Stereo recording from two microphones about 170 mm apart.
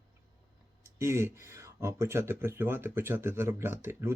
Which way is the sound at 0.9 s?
15° right (ahead or behind).